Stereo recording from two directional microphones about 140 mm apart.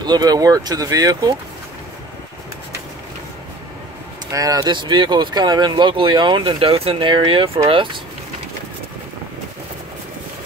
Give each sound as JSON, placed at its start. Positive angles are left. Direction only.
{"t": 0.0, "sound": "speech", "side_deg": -30}
{"t": 4.3, "sound": "speech", "side_deg": -25}